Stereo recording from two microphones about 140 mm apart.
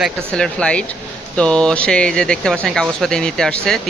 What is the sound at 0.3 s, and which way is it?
Speech, 5° left (ahead or behind).